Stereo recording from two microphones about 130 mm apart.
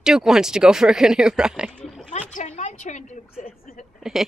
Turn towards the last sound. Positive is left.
turn(degrees=-5)  # may be behind; listen again after turning